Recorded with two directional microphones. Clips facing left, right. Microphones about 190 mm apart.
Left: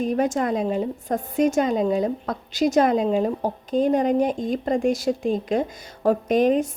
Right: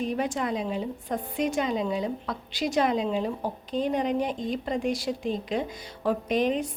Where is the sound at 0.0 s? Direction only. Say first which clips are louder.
Left 6 dB; 45° left (ahead or behind).